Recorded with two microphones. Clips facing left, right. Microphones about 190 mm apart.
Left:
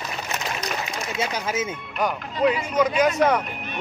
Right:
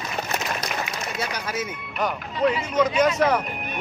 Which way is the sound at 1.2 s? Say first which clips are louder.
Left 4 dB; 25° left (ahead or behind).